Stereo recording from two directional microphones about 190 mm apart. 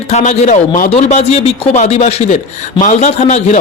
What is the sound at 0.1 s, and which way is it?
A man's voice, 40° left (ahead or behind).